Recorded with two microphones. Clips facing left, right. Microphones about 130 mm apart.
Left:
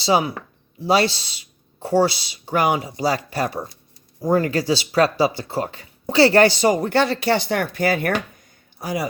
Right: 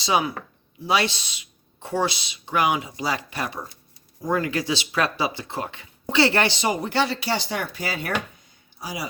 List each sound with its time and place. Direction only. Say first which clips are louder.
0.0 s speech: left 4 dB; 30° left (ahead or behind); by 9.0 s 50° left (ahead or behind)